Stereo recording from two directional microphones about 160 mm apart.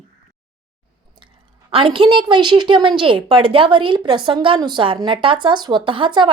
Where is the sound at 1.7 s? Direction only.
35° right (ahead or behind).